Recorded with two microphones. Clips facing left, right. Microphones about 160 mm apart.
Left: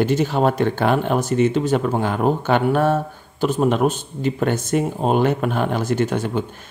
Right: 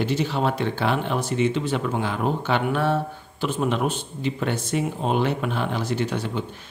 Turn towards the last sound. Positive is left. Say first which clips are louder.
# left 5 dB
turn(degrees=50)  # may be behind; listen again after turning